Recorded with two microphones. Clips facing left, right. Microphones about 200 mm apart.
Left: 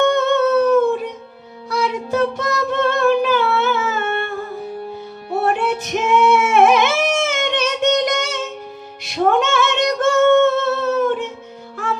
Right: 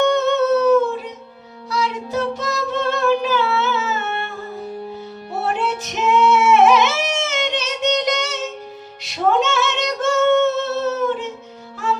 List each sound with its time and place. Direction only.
0.0 s music: 55° left (ahead or behind)
5.5 s singing: 55° left (ahead or behind)
9.0 s female singing: 55° left (ahead or behind)